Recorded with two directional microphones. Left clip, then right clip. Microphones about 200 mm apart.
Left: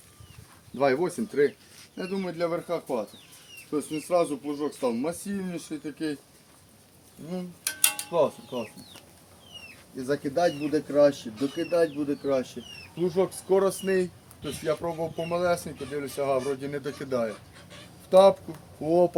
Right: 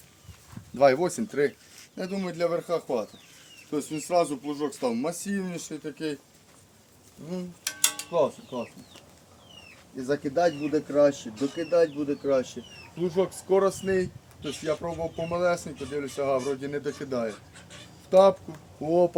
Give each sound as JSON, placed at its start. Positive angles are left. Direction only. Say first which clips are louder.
{"t": 0.8, "sound": "speech", "louder": "right 4 dB", "side_deg": -55}
{"t": 7.6, "sound": "a sound", "louder": "even", "side_deg": -5}
{"t": 8.5, "sound": "speech", "louder": "left 1 dB", "side_deg": 15}
{"t": 10.0, "sound": "speech", "louder": "right 1 dB", "side_deg": 10}
{"t": 13.0, "sound": "speech", "louder": "left 1 dB", "side_deg": 10}